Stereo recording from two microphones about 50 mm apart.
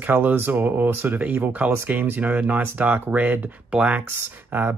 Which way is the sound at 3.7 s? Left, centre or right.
Centre.